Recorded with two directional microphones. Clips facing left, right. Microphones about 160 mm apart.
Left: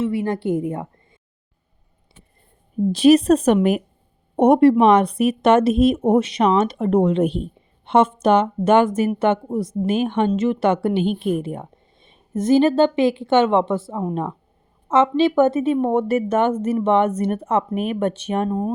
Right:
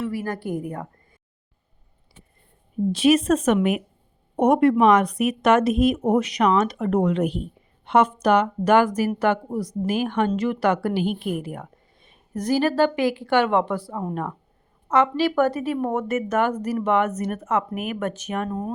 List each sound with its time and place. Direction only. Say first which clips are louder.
0.0 s speech: left 6 dB; 25° left (ahead or behind)
2.9 s speech: left 5 dB; 35° left (ahead or behind)